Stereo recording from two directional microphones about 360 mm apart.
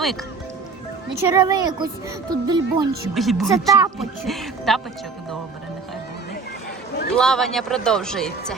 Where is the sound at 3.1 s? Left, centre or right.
Centre.